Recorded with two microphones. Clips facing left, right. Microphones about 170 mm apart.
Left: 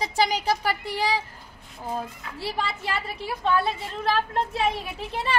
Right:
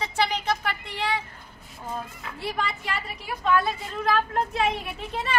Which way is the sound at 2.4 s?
30° left (ahead or behind).